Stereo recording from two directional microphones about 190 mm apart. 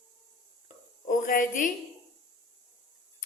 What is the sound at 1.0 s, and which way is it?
Speech, 45° left (ahead or behind).